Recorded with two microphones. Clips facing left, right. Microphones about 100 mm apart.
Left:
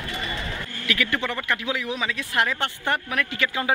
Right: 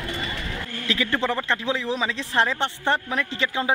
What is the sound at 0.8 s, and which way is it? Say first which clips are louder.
Speech: right 2 dB; 30° right (ahead or behind).